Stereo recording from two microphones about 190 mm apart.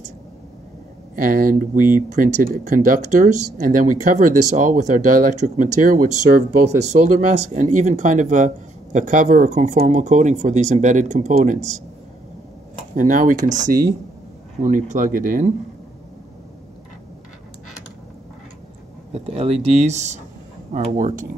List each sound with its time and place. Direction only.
1.1 s speech: 45° right (ahead or behind)
12.9 s speech: 45° right (ahead or behind)
19.1 s speech: 30° right (ahead or behind)